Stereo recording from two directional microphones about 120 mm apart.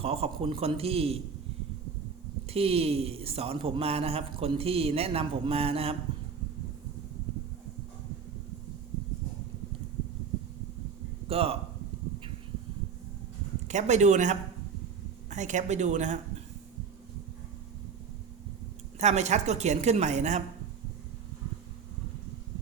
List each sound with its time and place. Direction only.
0.0 s a man's voice: 55° right (ahead or behind)
2.5 s a man's voice: 55° right (ahead or behind)
11.3 s speech: 55° right (ahead or behind)
13.7 s a woman's voice: 75° right (ahead or behind)
18.9 s a woman's voice: 75° right (ahead or behind)